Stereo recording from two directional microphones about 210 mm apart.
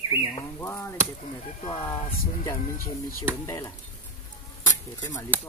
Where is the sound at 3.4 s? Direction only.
15° left (ahead or behind).